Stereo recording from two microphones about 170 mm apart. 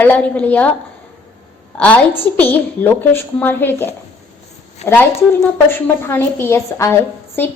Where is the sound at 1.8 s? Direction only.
10° left (ahead or behind).